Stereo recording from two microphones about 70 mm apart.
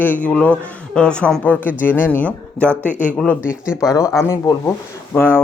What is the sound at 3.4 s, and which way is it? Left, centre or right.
Speech, centre.